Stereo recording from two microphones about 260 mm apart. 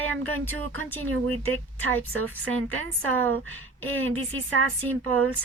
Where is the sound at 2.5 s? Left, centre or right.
Right.